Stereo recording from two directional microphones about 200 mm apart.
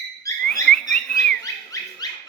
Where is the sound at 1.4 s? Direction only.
15° left (ahead or behind).